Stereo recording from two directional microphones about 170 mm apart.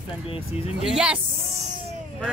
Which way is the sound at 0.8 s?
5° right (ahead or behind).